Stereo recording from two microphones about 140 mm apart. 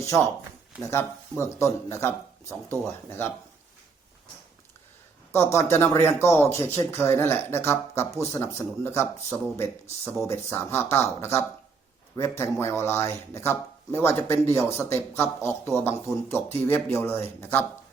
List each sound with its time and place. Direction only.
0.8 s speech: 20° left (ahead or behind)
5.3 s speech: 20° left (ahead or behind)
12.4 s speech: 20° left (ahead or behind)